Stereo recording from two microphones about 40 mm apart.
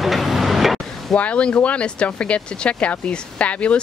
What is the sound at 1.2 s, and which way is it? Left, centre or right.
Speech, left.